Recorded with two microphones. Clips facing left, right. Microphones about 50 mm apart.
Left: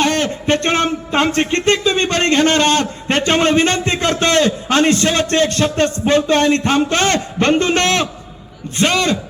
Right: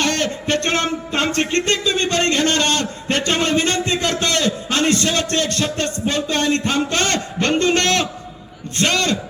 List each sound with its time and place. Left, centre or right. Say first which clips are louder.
0.0 s speech: left 4 dB; left
8.7 s a man's voice: left 3 dB; centre